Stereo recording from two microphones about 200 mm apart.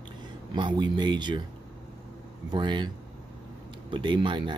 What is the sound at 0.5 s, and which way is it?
Speech, 20° right (ahead or behind).